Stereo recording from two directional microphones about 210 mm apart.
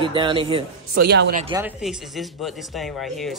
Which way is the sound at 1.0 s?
50° right (ahead or behind).